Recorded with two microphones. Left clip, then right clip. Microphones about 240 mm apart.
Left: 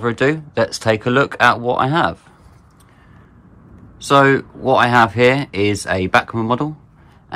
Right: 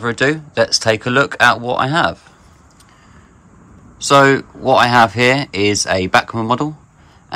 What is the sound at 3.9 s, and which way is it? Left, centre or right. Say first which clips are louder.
Speech: right 2 dB; centre.